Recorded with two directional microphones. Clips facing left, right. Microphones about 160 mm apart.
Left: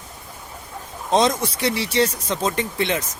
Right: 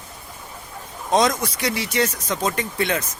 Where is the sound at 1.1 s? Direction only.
25° left (ahead or behind).